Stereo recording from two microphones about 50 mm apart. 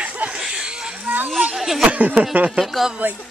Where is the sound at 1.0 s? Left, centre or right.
Right.